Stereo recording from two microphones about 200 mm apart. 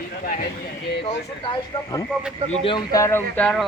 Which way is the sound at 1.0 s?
25° left (ahead or behind).